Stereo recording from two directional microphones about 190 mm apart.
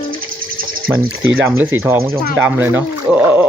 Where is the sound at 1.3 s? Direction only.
10° right (ahead or behind).